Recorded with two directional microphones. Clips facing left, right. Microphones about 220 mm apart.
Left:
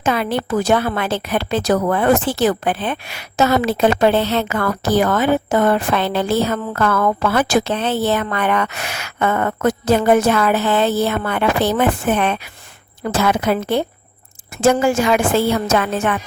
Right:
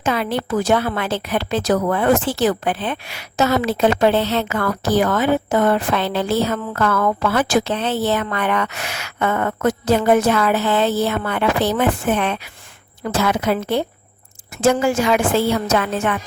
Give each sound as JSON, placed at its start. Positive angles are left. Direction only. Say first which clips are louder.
{"t": 0.0, "sound": "a woman's voice", "louder": "left 2 dB", "side_deg": 55}